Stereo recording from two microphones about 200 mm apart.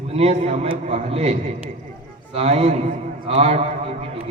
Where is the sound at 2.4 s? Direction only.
30° right (ahead or behind).